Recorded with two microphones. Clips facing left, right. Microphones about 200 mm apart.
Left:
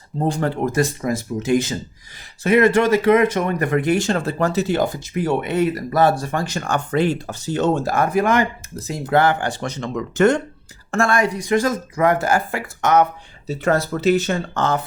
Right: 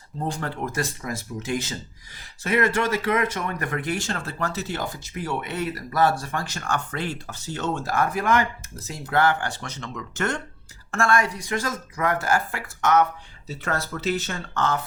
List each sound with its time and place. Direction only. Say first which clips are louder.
0.7 s speech: left 9 dB; 15° left (ahead or behind)